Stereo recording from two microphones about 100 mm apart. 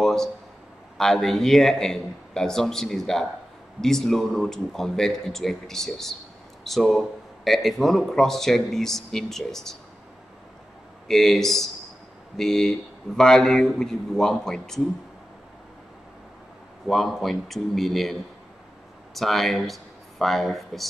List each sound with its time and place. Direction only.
0.0 s a sound: 5° left (ahead or behind)
0.9 s speech: centre (ahead or behind)
11.1 s speech: 5° left (ahead or behind)
16.8 s speech: centre (ahead or behind)
19.1 s speech: centre (ahead or behind)